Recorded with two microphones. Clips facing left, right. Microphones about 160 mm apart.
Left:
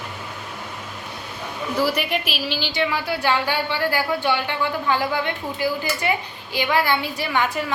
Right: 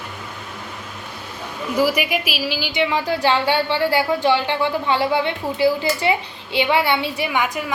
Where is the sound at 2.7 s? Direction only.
20° right (ahead or behind).